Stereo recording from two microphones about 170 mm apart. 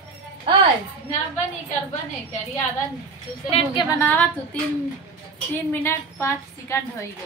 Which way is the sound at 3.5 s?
35° left (ahead or behind).